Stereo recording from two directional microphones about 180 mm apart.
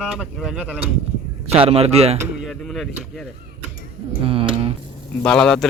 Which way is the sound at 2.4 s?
Centre (ahead or behind).